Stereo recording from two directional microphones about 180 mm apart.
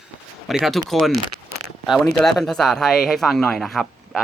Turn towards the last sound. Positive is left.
turn(degrees=0)  # may be behind; listen again after turning